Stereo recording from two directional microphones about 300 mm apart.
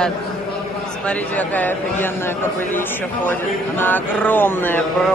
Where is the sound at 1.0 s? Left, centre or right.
Centre.